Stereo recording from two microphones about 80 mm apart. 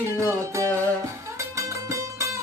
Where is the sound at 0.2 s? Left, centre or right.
Right.